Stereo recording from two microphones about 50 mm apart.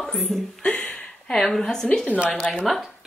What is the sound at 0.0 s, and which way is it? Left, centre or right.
Speech, centre.